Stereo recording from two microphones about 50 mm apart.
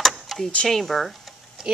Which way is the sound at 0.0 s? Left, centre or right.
Centre.